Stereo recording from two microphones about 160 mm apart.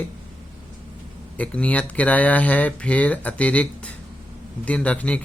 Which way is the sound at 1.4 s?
10° left (ahead or behind).